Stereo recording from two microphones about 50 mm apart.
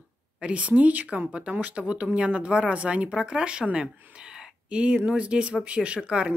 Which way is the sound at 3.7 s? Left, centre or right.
Centre.